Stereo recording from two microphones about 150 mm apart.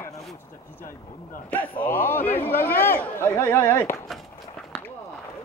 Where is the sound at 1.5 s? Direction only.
10° left (ahead or behind).